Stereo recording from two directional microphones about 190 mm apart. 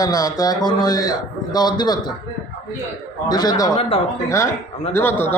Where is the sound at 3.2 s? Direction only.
20° left (ahead or behind).